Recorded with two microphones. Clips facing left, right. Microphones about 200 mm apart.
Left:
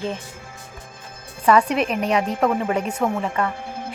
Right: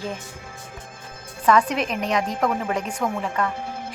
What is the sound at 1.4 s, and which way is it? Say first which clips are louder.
Speech: left 2 dB; 10° left (ahead or behind).